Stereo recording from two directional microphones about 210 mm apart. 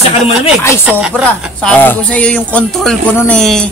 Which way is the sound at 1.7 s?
10° left (ahead or behind).